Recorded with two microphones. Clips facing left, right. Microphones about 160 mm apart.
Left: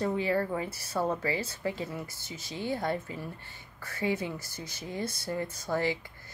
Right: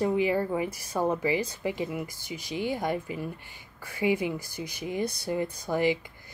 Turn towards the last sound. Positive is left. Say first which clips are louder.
# right 4 dB
turn(degrees=-15)  # may be behind; listen again after turning